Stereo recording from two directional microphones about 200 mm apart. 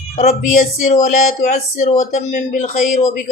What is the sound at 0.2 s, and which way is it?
Speech, 35° left (ahead or behind).